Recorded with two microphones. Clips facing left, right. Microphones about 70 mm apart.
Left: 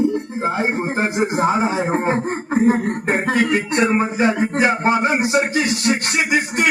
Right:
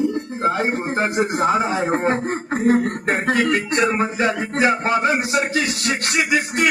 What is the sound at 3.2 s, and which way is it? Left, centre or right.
Speech, centre.